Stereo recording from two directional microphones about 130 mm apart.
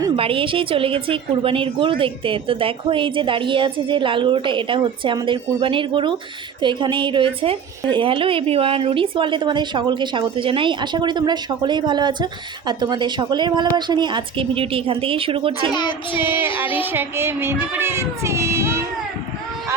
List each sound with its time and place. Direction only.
0.2 s a woman's voice: 45° right (ahead or behind)
15.7 s child singing: 35° left (ahead or behind)
16.8 s child singing: 15° right (ahead or behind)